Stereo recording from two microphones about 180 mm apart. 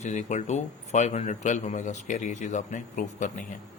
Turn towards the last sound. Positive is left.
turn(degrees=45)  # may be behind; listen again after turning